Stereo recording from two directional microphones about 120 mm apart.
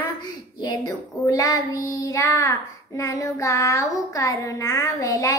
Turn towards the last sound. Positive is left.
turn(degrees=25)  # may be behind; listen again after turning